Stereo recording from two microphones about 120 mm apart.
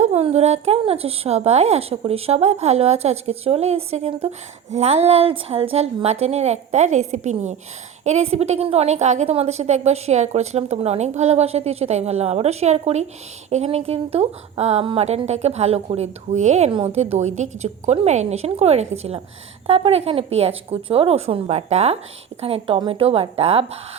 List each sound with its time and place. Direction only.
0.0 s a woman's voice: 60° right (ahead or behind)
22.4 s speech: 55° right (ahead or behind)